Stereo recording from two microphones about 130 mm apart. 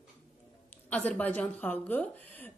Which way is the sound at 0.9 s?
10° left (ahead or behind).